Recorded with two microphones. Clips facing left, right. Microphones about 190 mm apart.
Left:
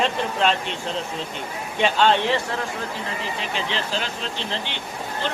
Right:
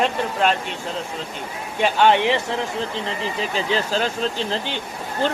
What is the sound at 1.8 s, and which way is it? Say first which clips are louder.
Speech: right 2 dB; 10° right (ahead or behind).